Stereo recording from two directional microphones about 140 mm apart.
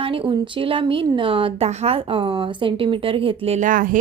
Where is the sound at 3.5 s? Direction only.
70° right (ahead or behind).